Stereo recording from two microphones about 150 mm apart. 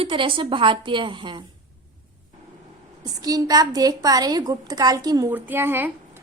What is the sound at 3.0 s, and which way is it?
A woman's voice, 25° right (ahead or behind).